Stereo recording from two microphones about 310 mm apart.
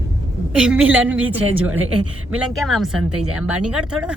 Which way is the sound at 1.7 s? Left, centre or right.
Right.